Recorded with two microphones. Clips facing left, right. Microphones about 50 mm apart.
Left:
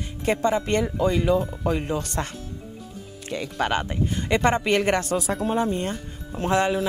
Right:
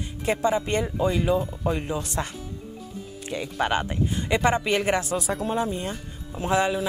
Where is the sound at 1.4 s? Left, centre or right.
Left.